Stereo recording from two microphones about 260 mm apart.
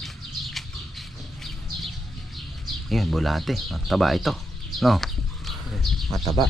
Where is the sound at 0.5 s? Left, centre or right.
Centre.